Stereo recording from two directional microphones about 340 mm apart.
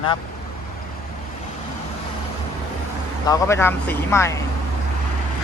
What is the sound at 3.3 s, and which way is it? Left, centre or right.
Speech, centre.